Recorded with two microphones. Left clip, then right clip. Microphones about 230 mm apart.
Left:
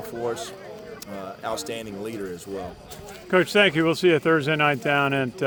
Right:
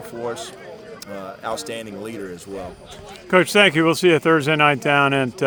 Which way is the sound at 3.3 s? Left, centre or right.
Right.